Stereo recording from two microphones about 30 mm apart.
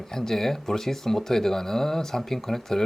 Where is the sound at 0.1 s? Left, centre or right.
Centre.